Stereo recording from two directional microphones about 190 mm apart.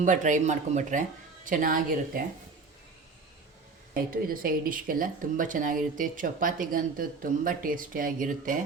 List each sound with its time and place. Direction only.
0.0 s speech: 40° right (ahead or behind)
3.9 s speech: 50° right (ahead or behind)